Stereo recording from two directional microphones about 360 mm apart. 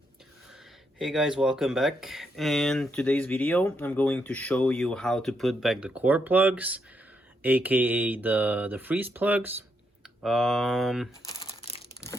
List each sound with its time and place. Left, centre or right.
0.9 s speech: centre